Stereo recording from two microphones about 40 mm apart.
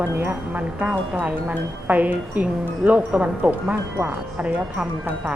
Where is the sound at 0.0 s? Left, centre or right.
Right.